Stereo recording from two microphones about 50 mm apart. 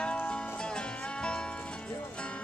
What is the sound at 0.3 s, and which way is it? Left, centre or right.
Music, centre.